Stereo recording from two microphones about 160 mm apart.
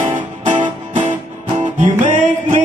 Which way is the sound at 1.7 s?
50° right (ahead or behind).